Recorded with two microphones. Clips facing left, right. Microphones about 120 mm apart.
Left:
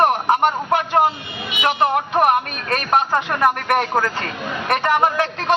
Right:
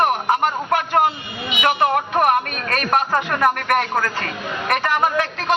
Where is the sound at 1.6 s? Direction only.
25° left (ahead or behind).